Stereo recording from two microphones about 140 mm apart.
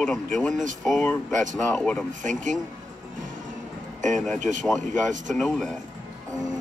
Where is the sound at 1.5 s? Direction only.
5° left (ahead or behind).